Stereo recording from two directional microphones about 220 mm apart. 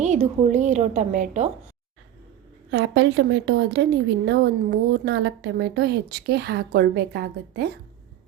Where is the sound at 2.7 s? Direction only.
55° right (ahead or behind).